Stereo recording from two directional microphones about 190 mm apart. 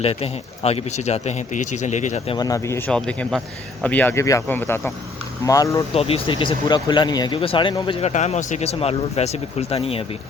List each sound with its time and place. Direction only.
0.0 s speech: 30° left (ahead or behind)
2.3 s speech: 20° left (ahead or behind)
5.9 s speech: 30° left (ahead or behind)
8.0 s speech: 35° left (ahead or behind)